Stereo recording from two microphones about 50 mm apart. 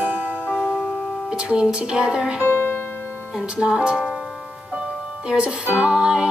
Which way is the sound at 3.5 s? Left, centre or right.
Centre.